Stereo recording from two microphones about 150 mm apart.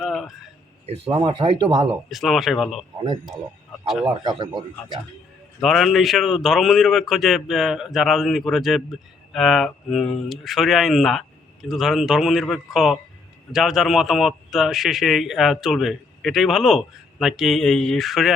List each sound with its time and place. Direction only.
0.0 s a sound: centre (ahead or behind)
0.9 s speech: 35° right (ahead or behind)
2.0 s a man's voice: centre (ahead or behind)
4.2 s speech: 30° right (ahead or behind)
5.6 s a man's voice: centre (ahead or behind)